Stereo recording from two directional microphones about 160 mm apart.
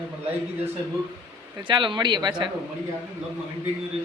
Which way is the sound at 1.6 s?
30° right (ahead or behind).